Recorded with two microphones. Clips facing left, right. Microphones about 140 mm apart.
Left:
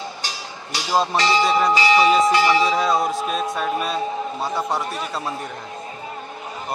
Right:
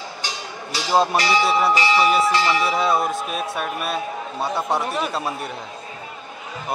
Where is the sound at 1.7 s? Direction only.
25° left (ahead or behind).